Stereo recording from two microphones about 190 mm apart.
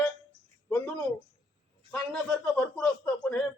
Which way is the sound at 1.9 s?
5° left (ahead or behind).